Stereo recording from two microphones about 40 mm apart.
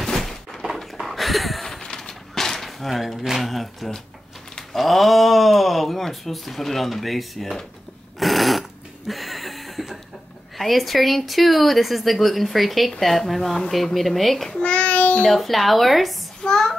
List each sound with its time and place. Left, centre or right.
0.2 s thunk: centre
0.9 s a sound: centre
1.8 s a sound: centre
4.7 s speech: centre
8.2 s a sound: centre
10.6 s speech: centre
14.5 s child singing: left
15.2 s speech: centre
16.4 s child singing: centre